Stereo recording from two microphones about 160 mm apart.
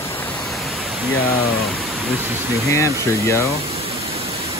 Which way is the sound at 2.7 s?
20° left (ahead or behind).